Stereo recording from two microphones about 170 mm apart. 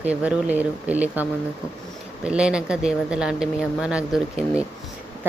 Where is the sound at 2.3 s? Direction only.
5° right (ahead or behind).